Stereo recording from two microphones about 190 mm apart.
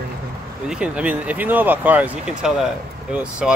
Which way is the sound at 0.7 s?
5° right (ahead or behind).